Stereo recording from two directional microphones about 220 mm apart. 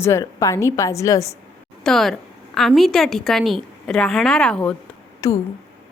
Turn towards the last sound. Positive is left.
turn(degrees=15)  # may be behind; listen again after turning